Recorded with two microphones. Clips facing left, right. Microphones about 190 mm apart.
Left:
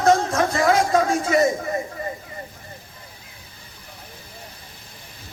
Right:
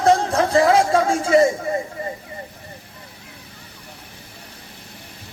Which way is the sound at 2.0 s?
30° right (ahead or behind).